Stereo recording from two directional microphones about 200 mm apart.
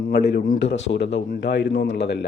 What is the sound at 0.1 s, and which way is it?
Speech, 50° left (ahead or behind).